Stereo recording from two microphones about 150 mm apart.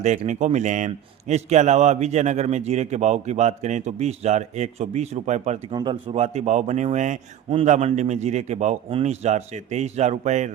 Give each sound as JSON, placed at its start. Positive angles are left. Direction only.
{"t": 0.3, "sound": "a man's voice", "side_deg": -55}
{"t": 5.7, "sound": "a man's voice", "side_deg": -35}